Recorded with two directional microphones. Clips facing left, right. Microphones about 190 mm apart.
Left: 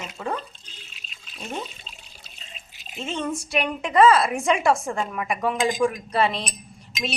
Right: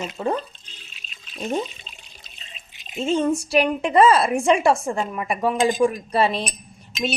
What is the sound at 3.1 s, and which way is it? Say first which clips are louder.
A woman's voice: right 8 dB; 30° right (ahead or behind).